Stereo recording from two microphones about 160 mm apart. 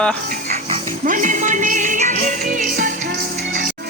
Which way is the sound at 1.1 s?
50° right (ahead or behind).